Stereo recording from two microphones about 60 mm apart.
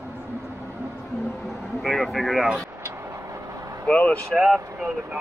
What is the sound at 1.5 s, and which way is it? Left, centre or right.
Vehicle, centre.